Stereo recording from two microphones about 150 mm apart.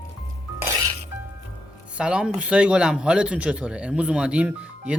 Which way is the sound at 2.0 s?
5° right (ahead or behind).